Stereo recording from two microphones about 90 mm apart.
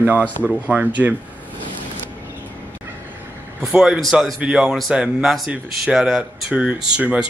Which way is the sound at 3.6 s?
5° right (ahead or behind).